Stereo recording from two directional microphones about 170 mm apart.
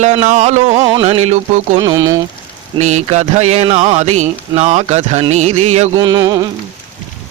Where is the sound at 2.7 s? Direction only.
40° right (ahead or behind).